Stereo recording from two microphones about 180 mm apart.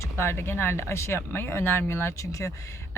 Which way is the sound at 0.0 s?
15° left (ahead or behind).